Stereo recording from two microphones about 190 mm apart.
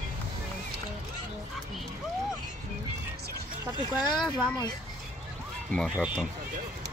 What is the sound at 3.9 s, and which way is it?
Speech, 20° left (ahead or behind).